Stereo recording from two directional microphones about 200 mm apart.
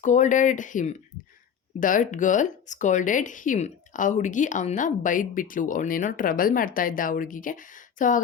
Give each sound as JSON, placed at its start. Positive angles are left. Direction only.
{"t": 0.0, "sound": "speech", "side_deg": 40}